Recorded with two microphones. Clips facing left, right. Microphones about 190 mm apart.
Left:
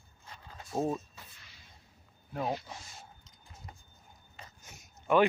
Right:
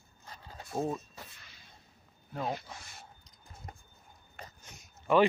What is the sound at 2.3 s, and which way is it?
Speech, 10° left (ahead or behind).